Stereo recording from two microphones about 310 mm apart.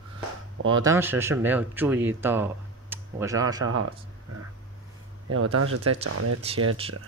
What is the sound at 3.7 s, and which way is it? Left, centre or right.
Speech, right.